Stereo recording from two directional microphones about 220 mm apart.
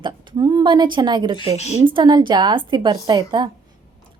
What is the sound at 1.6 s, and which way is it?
Speech, 30° left (ahead or behind).